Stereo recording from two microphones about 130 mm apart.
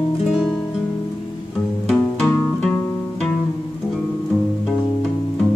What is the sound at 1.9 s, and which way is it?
Music, 5° left (ahead or behind).